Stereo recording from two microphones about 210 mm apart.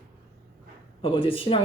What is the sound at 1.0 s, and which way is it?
Speech, 25° left (ahead or behind).